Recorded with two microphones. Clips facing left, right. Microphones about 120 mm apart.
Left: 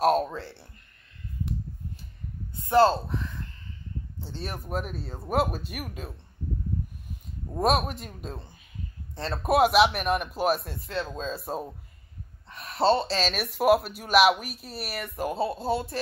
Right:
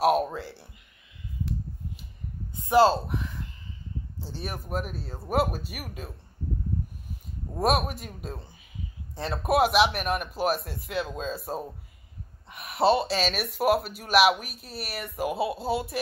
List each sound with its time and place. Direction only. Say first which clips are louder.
0.0 s speech: even; 5° right (ahead or behind)
2.6 s speech: even; 15° right (ahead or behind)
4.4 s speech: even; 5° right (ahead or behind)
7.5 s speech: left 1 dB; 5° right (ahead or behind)
12.4 s speech: even; 10° right (ahead or behind)